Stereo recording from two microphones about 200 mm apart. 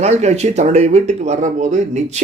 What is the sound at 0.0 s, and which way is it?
Speech, 35° right (ahead or behind).